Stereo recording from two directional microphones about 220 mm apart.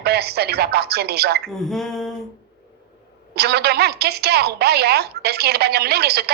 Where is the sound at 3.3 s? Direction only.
45° right (ahead or behind).